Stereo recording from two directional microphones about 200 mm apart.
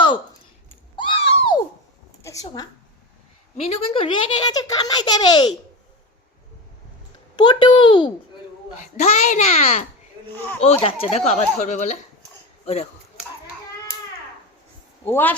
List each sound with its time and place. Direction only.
0.9 s a sound: 25° left (ahead or behind)
2.2 s a sound: 15° left (ahead or behind)
3.7 s a child's voice: 30° left (ahead or behind)
7.3 s a child's voice: 25° left (ahead or behind)
8.8 s speech: 35° left (ahead or behind)
10.3 s speech: 10° left (ahead or behind)
10.6 s speech: 30° left (ahead or behind)
15.0 s speech: 10° left (ahead or behind)